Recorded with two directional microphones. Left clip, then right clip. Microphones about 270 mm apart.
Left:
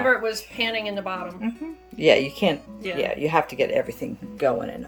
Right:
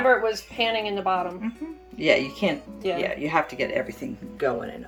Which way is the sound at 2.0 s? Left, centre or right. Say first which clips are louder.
Left 3 dB; left.